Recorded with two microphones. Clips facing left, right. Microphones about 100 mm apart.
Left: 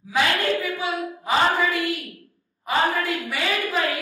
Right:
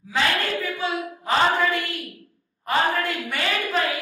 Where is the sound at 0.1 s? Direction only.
15° left (ahead or behind).